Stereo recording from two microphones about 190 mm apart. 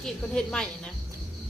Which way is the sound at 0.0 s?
5° left (ahead or behind).